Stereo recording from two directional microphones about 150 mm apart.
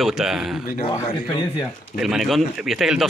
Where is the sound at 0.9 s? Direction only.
35° left (ahead or behind).